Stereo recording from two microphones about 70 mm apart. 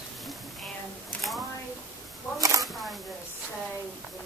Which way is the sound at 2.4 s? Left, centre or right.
Right.